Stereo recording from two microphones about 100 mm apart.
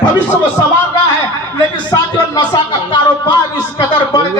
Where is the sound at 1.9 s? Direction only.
45° left (ahead or behind).